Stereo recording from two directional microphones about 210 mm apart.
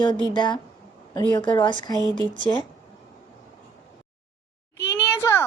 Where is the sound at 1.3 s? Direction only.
20° left (ahead or behind).